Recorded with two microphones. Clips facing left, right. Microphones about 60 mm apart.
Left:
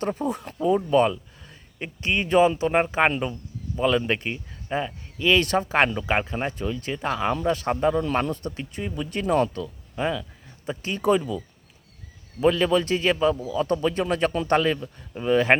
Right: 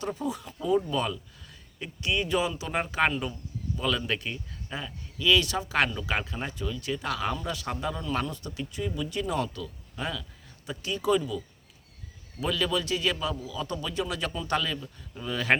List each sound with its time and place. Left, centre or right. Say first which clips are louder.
0.0 s speech: left 5 dB; left
0.6 s speech: left 7 dB; left
9.6 s speech: left 7 dB; left